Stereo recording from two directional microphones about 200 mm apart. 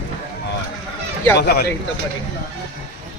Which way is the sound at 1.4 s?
55° left (ahead or behind).